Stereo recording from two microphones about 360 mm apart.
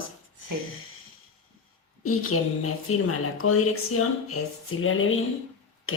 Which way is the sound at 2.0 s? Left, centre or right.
Left.